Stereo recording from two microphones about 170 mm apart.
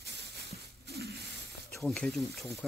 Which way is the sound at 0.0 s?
70° right (ahead or behind).